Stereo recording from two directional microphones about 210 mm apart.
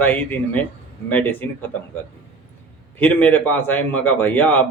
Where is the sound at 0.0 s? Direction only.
10° left (ahead or behind).